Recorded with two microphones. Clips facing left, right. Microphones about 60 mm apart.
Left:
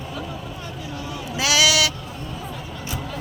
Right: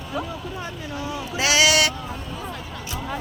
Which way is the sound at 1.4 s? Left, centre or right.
Right.